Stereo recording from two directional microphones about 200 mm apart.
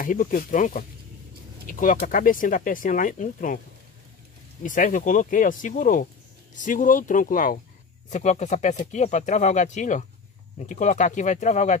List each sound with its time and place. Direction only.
0.0 s speech: 45° left (ahead or behind)
4.6 s speech: 40° left (ahead or behind)